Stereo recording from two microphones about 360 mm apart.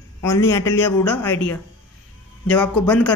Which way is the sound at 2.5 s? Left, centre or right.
Centre.